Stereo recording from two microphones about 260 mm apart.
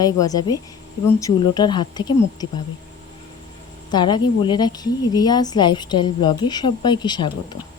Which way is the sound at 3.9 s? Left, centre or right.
Centre.